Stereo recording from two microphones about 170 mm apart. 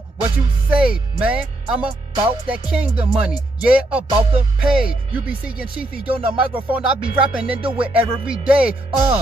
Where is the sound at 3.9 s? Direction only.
35° right (ahead or behind).